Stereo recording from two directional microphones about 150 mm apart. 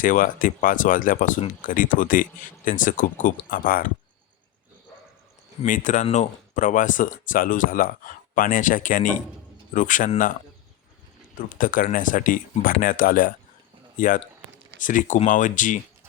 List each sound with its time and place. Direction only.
0.0 s speech: 65° left (ahead or behind)
5.6 s speech: 60° left (ahead or behind)
11.3 s speech: 65° left (ahead or behind)
14.8 s speech: 60° left (ahead or behind)